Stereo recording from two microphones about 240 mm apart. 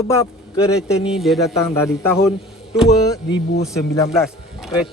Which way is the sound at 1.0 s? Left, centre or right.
Centre.